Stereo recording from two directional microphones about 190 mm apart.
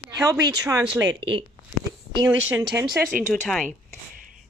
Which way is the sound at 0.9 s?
5° right (ahead or behind).